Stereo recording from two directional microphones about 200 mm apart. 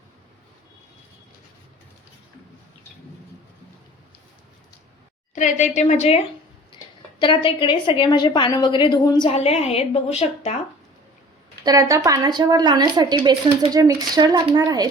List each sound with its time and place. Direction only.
5.3 s a woman's voice: 35° left (ahead or behind)
7.2 s a woman's voice: 25° left (ahead or behind)
9.3 s a woman's voice: 35° left (ahead or behind)
11.6 s speech: 15° right (ahead or behind)